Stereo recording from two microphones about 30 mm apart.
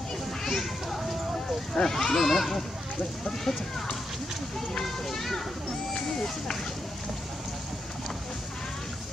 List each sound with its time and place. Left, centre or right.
0.4 s children playing: centre
1.8 s a child's voice: centre
2.1 s a child's voice: centre